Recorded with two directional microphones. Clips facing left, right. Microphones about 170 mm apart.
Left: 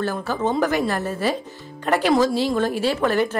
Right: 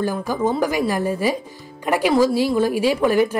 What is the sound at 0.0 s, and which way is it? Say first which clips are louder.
A woman's voice: right 2 dB; 10° right (ahead or behind).